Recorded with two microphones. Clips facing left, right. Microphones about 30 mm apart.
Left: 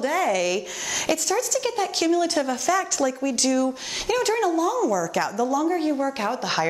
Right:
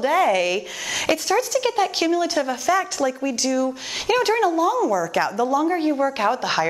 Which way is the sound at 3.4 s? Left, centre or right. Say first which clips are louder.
Left 1 dB; centre.